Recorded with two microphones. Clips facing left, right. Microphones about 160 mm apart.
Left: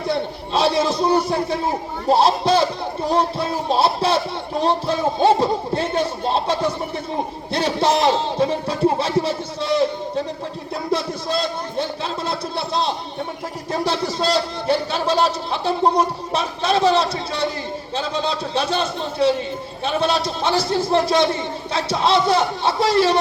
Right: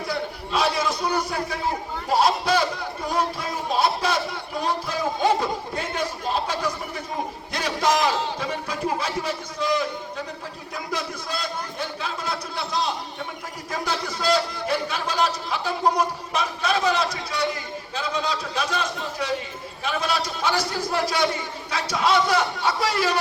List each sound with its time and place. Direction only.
0.1 s a man's voice: 30° left (ahead or behind)
10.9 s a sound: 30° left (ahead or behind)
13.7 s a man's voice: 30° left (ahead or behind)